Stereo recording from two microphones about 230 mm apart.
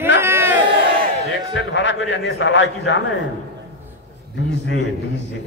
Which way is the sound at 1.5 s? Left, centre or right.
Left.